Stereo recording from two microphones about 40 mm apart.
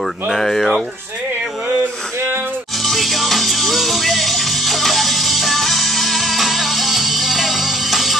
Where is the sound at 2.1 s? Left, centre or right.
Right.